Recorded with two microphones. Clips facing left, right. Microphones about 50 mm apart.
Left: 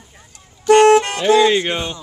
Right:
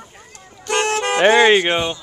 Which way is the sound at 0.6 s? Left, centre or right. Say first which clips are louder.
Left 10 dB; centre.